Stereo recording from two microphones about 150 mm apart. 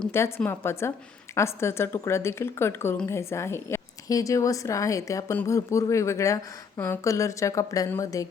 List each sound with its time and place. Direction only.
0.1 s a woman's voice: 15° left (ahead or behind)